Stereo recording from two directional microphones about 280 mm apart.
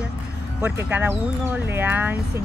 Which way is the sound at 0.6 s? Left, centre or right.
Centre.